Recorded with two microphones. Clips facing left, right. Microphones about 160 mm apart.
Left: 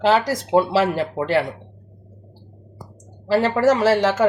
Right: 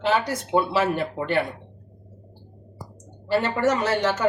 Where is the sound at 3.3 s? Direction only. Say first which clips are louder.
Left 5 dB; 90° left.